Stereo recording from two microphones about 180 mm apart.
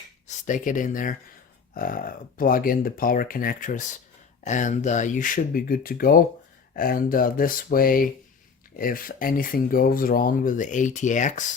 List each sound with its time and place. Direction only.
0.3 s speech: 45° left (ahead or behind)